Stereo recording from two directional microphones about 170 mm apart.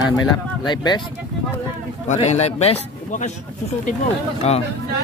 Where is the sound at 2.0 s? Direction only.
40° left (ahead or behind).